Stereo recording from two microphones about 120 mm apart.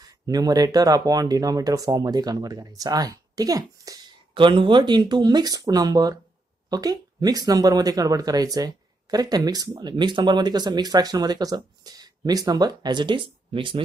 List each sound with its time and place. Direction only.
0.0 s speech: 30° right (ahead or behind)
4.3 s speech: 40° right (ahead or behind)